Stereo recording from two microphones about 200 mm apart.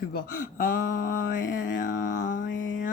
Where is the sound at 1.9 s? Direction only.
60° left (ahead or behind).